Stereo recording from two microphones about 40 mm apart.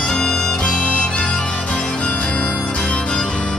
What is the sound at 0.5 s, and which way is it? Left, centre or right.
Harmonica, left.